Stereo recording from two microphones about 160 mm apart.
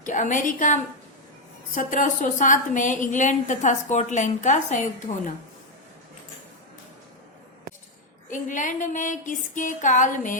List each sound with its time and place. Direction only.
0.0 s a woman's voice: 55° left (ahead or behind)
8.3 s a woman's voice: 55° left (ahead or behind)